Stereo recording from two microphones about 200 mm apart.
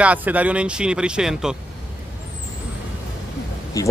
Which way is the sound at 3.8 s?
15° left (ahead or behind).